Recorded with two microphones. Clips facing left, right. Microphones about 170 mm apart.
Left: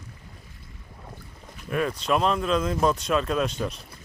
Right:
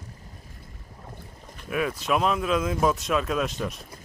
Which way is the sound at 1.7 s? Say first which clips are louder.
Left 1 dB; 5° right (ahead or behind).